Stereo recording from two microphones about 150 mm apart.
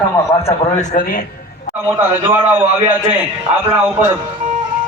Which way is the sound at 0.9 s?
70° left (ahead or behind).